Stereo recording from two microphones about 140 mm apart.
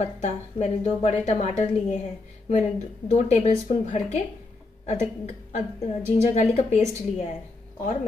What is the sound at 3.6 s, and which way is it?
Speech, 65° left (ahead or behind).